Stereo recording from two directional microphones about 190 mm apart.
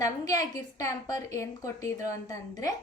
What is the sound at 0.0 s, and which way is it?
A woman's voice, 20° left (ahead or behind).